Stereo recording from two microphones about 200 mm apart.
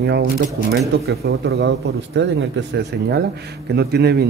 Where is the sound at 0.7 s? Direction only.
50° right (ahead or behind).